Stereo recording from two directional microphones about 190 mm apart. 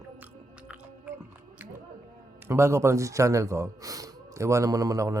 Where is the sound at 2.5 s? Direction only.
15° right (ahead or behind).